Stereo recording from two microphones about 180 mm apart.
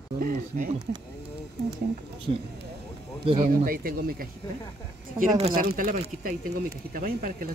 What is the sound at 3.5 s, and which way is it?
Speech, 50° right (ahead or behind).